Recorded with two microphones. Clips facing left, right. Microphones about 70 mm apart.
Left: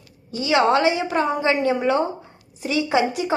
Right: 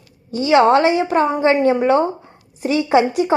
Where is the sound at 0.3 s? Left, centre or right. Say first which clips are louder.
Right 5 dB; right.